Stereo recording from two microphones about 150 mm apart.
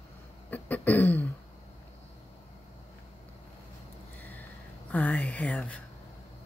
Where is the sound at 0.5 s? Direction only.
10° left (ahead or behind).